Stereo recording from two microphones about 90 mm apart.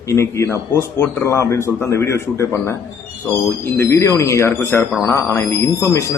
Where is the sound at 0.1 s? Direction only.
30° left (ahead or behind).